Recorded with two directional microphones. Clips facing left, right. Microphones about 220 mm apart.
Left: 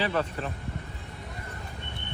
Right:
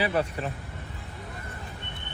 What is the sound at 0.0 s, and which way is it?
Speech, 10° right (ahead or behind).